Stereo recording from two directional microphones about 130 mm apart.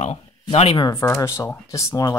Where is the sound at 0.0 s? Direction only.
55° left (ahead or behind).